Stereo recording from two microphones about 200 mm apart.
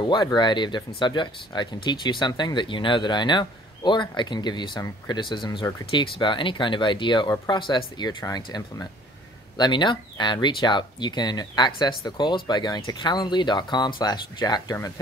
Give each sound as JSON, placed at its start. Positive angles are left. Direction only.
{"t": 0.0, "sound": "speech", "side_deg": 20}